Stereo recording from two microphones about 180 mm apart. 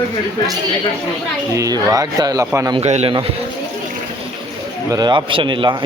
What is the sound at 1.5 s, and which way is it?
Speech, 20° right (ahead or behind).